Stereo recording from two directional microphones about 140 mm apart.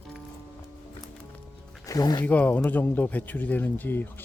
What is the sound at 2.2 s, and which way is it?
Speech, 10° left (ahead or behind).